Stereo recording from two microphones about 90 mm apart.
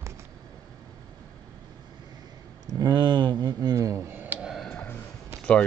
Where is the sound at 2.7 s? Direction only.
50° right (ahead or behind).